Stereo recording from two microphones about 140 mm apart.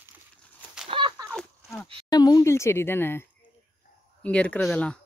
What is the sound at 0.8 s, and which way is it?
Whip, 40° right (ahead or behind).